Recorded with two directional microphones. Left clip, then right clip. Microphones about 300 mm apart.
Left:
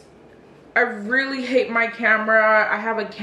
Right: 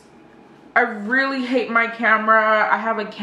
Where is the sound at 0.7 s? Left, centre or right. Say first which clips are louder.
Right 1 dB; centre.